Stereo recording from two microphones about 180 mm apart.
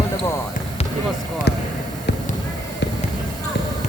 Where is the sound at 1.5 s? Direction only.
70° left (ahead or behind).